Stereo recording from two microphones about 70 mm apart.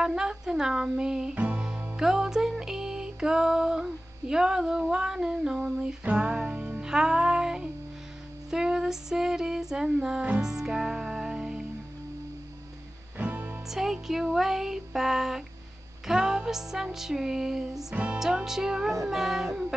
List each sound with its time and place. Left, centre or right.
0.0 s music: centre
1.3 s music: right
2.0 s music: centre
13.2 s music: right
13.7 s music: centre
17.9 s music: centre
18.2 s music: centre